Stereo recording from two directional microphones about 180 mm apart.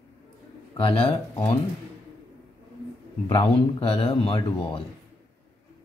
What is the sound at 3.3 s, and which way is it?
Speech, 30° left (ahead or behind).